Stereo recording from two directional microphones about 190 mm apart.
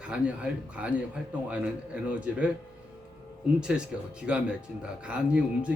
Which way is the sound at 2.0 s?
5° right (ahead or behind).